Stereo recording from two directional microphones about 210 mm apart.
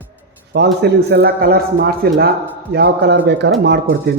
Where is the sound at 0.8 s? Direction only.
50° right (ahead or behind).